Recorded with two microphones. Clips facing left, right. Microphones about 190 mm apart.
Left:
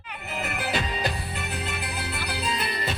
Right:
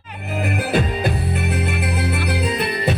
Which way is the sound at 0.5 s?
50° right (ahead or behind).